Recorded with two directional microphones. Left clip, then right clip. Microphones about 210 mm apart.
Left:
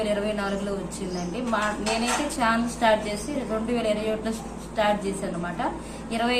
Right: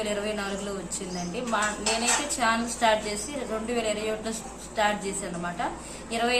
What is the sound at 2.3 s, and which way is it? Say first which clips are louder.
A woman's voice: left 1 dB; 5° right (ahead or behind).